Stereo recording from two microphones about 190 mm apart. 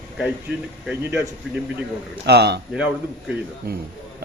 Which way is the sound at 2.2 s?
60° right (ahead or behind).